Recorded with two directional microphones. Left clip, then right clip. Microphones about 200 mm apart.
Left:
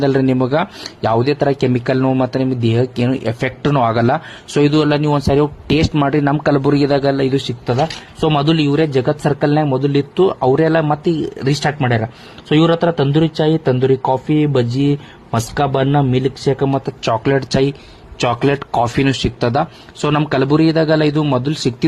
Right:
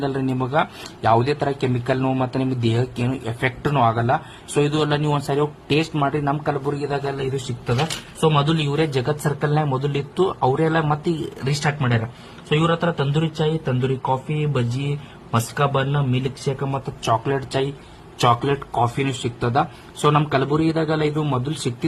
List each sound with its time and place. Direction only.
0.0 s speech: 30° left (ahead or behind)